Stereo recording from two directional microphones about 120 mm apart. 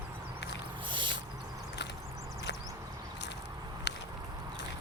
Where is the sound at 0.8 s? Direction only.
40° right (ahead or behind).